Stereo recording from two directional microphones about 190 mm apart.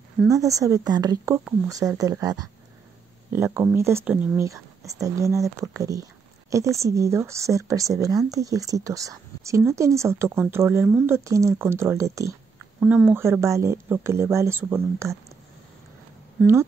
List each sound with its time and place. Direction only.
0.3 s speech: 15° right (ahead or behind)